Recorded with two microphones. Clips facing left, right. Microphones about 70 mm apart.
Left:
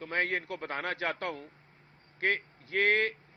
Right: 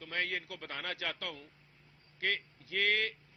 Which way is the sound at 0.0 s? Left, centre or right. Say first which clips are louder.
Left 6 dB; left.